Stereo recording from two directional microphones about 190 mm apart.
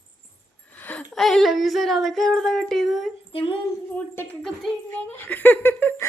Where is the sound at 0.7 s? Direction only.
10° left (ahead or behind).